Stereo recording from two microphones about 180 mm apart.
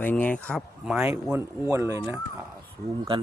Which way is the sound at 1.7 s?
15° right (ahead or behind).